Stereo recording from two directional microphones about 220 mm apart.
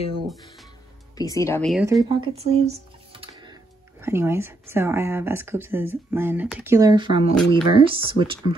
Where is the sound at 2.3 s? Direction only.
30° right (ahead or behind).